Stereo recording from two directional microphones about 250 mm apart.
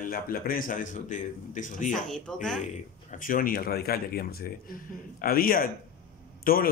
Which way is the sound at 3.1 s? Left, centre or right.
Left.